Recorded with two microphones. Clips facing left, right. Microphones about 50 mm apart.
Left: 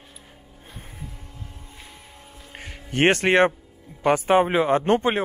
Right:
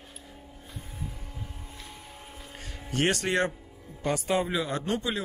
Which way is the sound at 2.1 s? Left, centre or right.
Centre.